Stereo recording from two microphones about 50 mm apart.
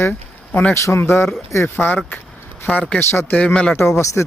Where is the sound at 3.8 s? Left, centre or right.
Left.